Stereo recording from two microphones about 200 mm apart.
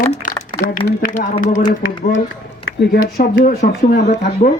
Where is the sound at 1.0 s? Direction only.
40° left (ahead or behind).